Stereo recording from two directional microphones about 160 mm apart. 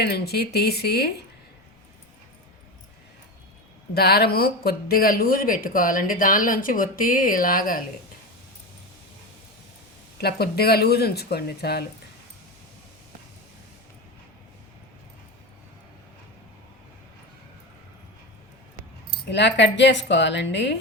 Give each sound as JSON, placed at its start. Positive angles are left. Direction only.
{"t": 0.0, "sound": "speech", "side_deg": 90}
{"t": 3.9, "sound": "speech", "side_deg": 80}
{"t": 10.2, "sound": "speech", "side_deg": 75}
{"t": 19.3, "sound": "speech", "side_deg": 90}